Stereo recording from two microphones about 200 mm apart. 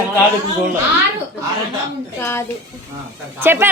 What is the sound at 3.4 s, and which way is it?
Speech, 10° right (ahead or behind).